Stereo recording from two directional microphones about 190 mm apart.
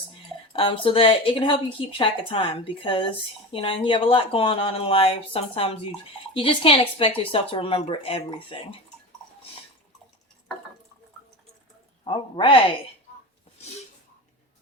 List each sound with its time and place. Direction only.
0.5 s a woman's voice: 30° left (ahead or behind)
12.0 s a woman's voice: 25° left (ahead or behind)